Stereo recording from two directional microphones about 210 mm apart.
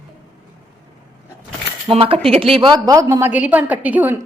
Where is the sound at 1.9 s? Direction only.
25° right (ahead or behind); by 4.1 s 5° right (ahead or behind).